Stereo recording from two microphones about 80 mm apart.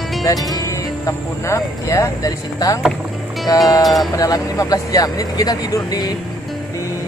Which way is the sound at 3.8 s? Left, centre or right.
Centre.